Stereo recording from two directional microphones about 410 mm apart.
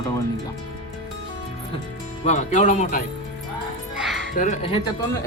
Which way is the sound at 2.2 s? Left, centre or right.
Centre.